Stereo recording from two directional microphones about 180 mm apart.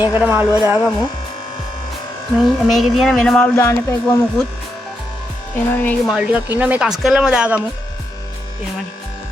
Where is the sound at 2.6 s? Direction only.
Centre (ahead or behind).